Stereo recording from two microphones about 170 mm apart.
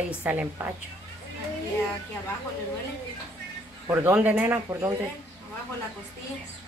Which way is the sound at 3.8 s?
10° right (ahead or behind).